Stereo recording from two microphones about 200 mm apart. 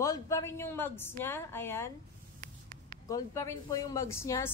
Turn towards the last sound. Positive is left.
turn(degrees=15)  # may be behind; listen again after turning